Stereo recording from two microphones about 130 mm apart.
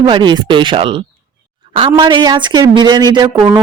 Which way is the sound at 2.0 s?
35° right (ahead or behind).